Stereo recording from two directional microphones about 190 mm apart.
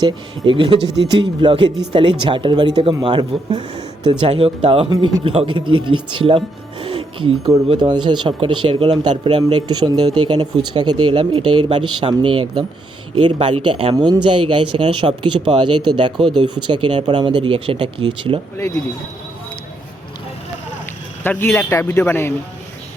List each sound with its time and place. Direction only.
0.0 s speech: 25° right (ahead or behind)
18.5 s a man's voice: 15° left (ahead or behind)
21.2 s a man's voice: 10° left (ahead or behind)